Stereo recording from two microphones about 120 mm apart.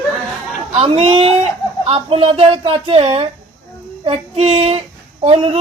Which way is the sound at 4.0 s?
55° right (ahead or behind).